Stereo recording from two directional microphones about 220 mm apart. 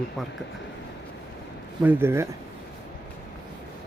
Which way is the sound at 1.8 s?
10° right (ahead or behind).